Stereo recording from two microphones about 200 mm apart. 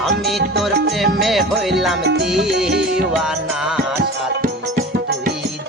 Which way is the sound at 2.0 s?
60° right (ahead or behind).